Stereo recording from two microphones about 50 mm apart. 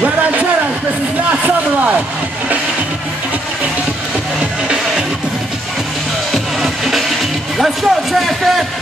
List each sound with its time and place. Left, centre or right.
0.0 s vehicle: right
6.3 s music: centre
7.5 s a sound: centre